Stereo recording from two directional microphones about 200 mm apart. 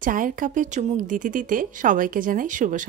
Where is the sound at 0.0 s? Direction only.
40° right (ahead or behind).